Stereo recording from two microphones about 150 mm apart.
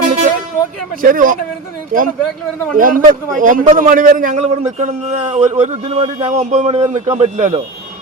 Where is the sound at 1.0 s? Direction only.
65° right (ahead or behind); by 7.6 s 50° right (ahead or behind).